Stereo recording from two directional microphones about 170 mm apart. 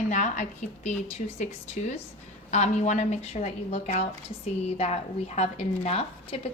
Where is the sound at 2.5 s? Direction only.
45° left (ahead or behind).